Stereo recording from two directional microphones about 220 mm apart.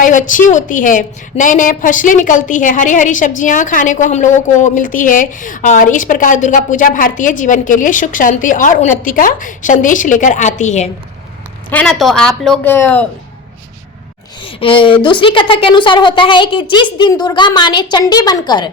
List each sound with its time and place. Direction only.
0.0 s a woman's voice: 35° left (ahead or behind)
11.7 s a woman's voice: 5° left (ahead or behind)
14.4 s a woman's voice: 25° left (ahead or behind)